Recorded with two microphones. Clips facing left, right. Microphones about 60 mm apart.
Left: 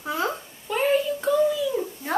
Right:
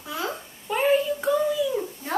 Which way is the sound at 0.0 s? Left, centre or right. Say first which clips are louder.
Left 4 dB; left.